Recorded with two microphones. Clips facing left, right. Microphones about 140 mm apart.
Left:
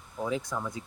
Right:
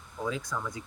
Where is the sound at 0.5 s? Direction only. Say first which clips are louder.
Left 1 dB; 25° left (ahead or behind).